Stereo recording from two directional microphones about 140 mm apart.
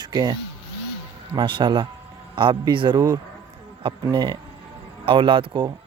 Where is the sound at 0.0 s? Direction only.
30° right (ahead or behind).